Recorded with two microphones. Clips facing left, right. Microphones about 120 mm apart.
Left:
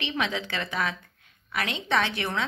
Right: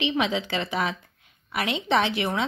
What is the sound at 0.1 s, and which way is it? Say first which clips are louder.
A woman's voice: right 4 dB; 15° right (ahead or behind).